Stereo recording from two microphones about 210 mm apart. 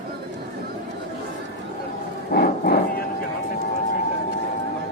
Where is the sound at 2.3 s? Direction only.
45° left (ahead or behind).